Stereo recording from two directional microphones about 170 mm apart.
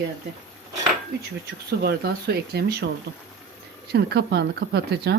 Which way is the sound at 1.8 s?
75° right (ahead or behind).